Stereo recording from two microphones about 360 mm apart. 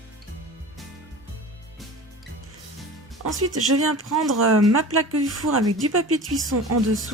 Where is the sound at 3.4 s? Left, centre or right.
Right.